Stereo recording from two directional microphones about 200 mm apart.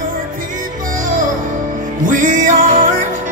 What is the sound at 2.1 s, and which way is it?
Music, 40° right (ahead or behind).